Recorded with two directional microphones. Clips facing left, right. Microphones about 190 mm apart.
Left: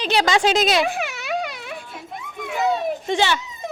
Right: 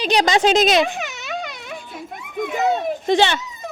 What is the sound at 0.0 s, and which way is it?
Speech, 15° right (ahead or behind).